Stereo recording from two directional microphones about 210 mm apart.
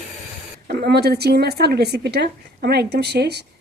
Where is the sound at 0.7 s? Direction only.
50° right (ahead or behind).